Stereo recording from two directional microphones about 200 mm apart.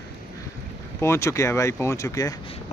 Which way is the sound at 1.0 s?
15° left (ahead or behind).